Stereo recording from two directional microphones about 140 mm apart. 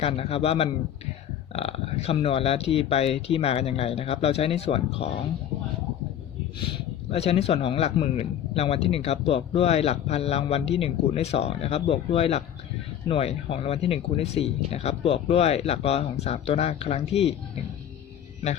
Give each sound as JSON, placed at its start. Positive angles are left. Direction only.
{"t": 0.0, "sound": "speech", "side_deg": 45}
{"t": 6.6, "sound": "speech", "side_deg": 40}